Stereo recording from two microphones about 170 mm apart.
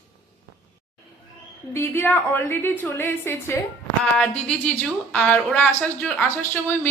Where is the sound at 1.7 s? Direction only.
15° left (ahead or behind).